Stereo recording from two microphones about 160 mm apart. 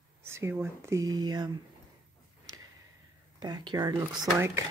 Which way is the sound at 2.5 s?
20° right (ahead or behind).